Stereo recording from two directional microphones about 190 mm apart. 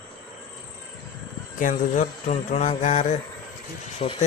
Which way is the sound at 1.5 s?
40° left (ahead or behind).